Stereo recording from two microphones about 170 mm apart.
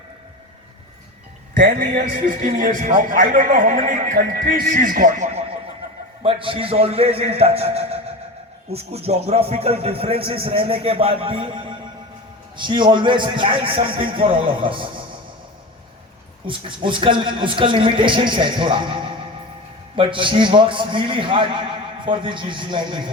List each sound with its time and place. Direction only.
1.6 s speech: 80° right
2.1 s a man's voice: 55° right (ahead or behind); by 14.8 s 30° right (ahead or behind)
16.5 s a man's voice: 30° right (ahead or behind)
20.0 s a man's voice: 30° right (ahead or behind)